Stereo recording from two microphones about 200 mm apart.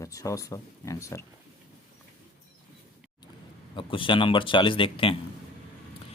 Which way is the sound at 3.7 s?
25° left (ahead or behind).